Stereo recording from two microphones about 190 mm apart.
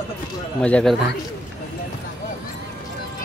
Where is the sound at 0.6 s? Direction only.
5° left (ahead or behind).